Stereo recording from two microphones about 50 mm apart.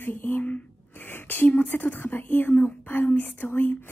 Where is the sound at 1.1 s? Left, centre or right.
Left.